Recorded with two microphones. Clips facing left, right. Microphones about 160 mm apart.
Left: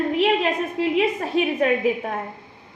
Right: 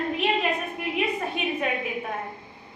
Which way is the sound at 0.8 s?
90° left.